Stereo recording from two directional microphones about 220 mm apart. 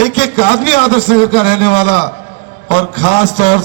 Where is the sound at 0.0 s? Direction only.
30° left (ahead or behind).